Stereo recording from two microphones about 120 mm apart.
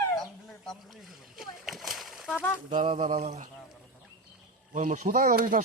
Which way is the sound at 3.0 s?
85° right.